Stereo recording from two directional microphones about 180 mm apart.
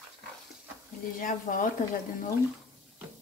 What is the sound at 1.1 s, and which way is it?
Speech, 50° left (ahead or behind).